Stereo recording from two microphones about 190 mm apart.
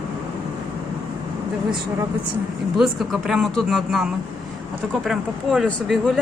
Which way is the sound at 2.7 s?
Centre (ahead or behind).